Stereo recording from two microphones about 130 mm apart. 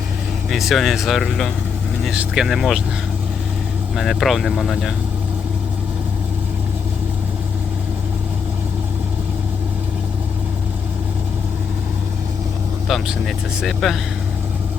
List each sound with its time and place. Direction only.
0.5 s speech: centre (ahead or behind)
3.9 s speech: centre (ahead or behind)
12.9 s speech: 5° right (ahead or behind)